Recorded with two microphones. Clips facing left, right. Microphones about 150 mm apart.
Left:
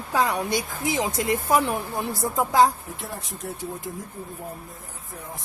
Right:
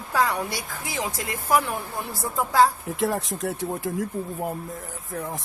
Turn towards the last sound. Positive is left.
turn(degrees=-90)